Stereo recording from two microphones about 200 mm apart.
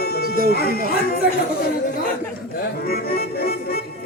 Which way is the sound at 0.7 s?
45° right (ahead or behind).